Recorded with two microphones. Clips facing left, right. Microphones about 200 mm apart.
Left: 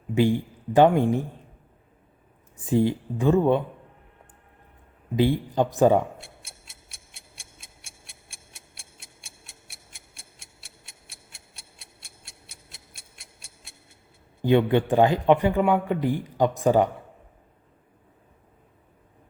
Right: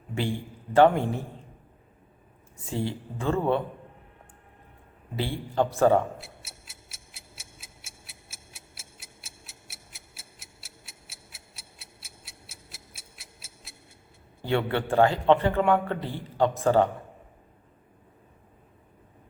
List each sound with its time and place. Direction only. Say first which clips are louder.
0.1 s a man's voice: left 9 dB; 15° left (ahead or behind)
2.6 s speech: left 9 dB; 15° left (ahead or behind)
5.1 s speech: left 6 dB; 15° left (ahead or behind)
6.1 s tick-tock: right 1 dB; centre (ahead or behind)
14.4 s speech: left 7 dB; 15° left (ahead or behind)